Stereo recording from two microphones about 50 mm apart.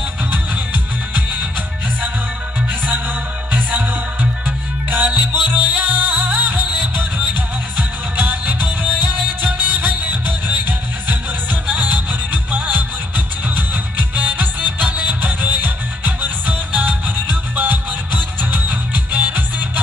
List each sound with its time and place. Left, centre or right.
3.5 s music: right
6.5 s music: centre
7.3 s music: right